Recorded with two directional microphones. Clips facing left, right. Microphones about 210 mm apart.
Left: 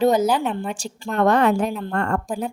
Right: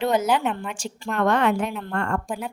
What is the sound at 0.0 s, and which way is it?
A woman's voice, 35° left (ahead or behind).